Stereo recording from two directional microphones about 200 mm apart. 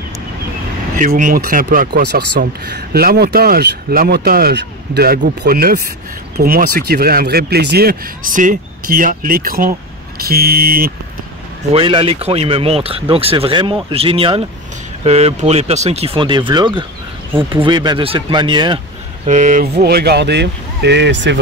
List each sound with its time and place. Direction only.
0.9 s speech: 40° right (ahead or behind)
11.7 s speech: 25° right (ahead or behind)
19.2 s speech: 40° right (ahead or behind)
19.8 s speech: 55° right (ahead or behind)